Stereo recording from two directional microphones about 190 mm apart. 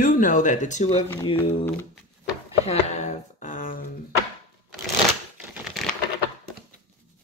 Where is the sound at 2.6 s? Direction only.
35° left (ahead or behind).